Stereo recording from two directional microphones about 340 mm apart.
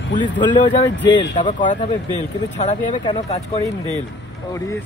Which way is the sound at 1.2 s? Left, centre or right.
Centre.